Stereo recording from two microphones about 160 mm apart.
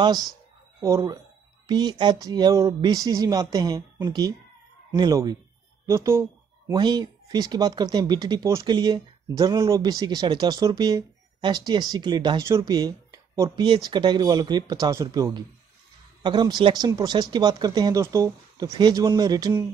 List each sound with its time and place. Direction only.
0.0 s speech: 25° right (ahead or behind)